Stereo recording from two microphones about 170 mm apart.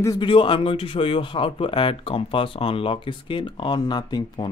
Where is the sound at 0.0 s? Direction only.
20° left (ahead or behind).